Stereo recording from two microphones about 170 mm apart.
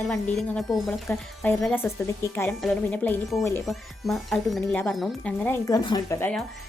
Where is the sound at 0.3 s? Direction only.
5° left (ahead or behind).